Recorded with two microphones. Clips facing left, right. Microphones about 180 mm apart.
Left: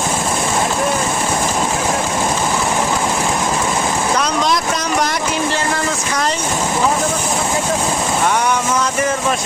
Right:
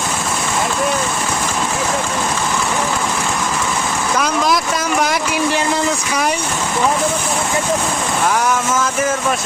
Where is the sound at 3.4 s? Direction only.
30° left (ahead or behind).